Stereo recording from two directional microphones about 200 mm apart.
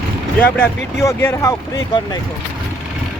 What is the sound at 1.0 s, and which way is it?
Speech, 15° left (ahead or behind).